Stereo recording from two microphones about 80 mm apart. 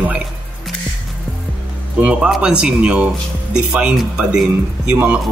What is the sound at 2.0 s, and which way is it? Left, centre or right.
Speech, centre.